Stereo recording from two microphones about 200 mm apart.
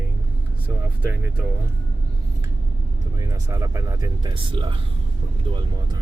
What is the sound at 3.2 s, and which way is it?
Speech, 15° right (ahead or behind).